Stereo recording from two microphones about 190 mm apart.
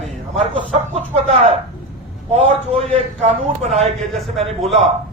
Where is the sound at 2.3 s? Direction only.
35° right (ahead or behind).